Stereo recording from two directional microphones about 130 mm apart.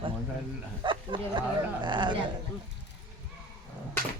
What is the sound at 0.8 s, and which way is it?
Speech, 35° right (ahead or behind).